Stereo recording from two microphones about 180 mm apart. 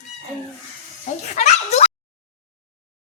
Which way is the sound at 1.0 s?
40° left (ahead or behind).